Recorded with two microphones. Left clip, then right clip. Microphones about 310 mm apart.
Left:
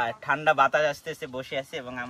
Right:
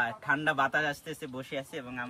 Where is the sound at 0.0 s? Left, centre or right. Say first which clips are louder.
Left 4 dB; centre.